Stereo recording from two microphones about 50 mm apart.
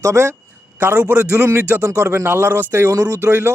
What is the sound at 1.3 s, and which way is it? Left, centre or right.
Speech, right.